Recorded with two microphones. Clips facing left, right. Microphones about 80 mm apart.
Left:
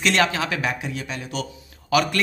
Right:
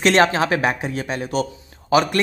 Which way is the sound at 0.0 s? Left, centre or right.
Right.